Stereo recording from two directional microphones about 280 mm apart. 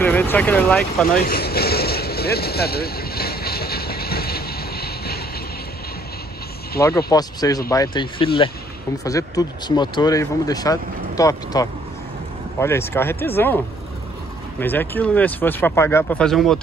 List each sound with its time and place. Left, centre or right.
0.0 s speech: centre
1.2 s vehicle: left
6.8 s speech: centre
14.6 s speech: centre